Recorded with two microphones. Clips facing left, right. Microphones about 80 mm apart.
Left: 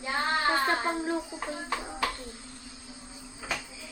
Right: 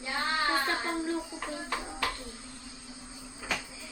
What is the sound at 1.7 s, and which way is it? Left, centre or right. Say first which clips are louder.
Hands: left 3 dB; centre.